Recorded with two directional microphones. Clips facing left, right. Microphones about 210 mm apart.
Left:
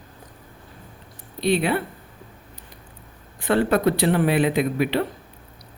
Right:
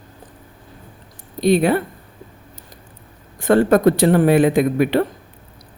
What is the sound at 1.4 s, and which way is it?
Speech, 45° right (ahead or behind).